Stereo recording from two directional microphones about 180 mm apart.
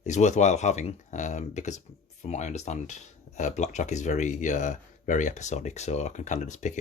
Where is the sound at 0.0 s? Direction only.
40° left (ahead or behind).